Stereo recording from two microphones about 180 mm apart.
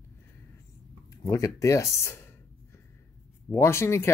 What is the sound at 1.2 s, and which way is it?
Speech, 20° left (ahead or behind).